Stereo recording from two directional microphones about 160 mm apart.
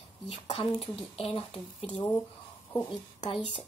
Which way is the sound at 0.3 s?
35° left (ahead or behind).